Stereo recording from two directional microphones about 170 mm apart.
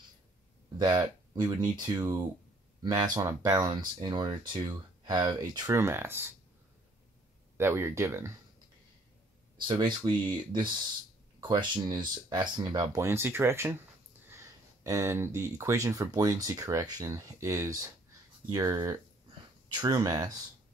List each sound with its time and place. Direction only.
0.7 s speech: 25° right (ahead or behind)
5.8 s speech: 15° right (ahead or behind)
7.5 s speech: 15° right (ahead or behind)
9.7 s speech: 25° right (ahead or behind)
14.8 s speech: 20° right (ahead or behind)